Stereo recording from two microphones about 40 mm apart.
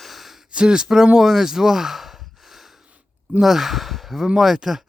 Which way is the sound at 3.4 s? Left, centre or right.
Centre.